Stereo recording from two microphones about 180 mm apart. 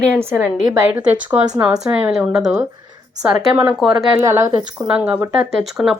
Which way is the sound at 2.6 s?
20° right (ahead or behind).